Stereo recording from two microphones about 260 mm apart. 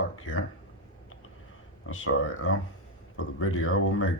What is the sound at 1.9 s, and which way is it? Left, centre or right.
Speech, left.